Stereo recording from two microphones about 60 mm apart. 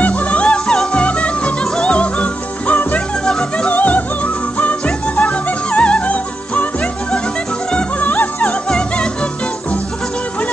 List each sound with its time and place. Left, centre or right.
0.0 s music: left
8.0 s music: left
8.4 s music: centre